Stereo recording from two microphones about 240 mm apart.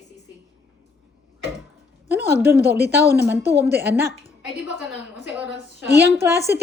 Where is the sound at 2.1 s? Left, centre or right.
Centre.